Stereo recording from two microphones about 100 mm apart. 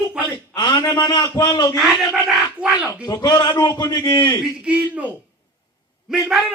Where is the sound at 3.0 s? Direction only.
40° left (ahead or behind).